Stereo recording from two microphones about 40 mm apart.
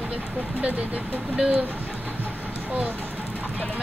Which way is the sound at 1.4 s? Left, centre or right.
Right.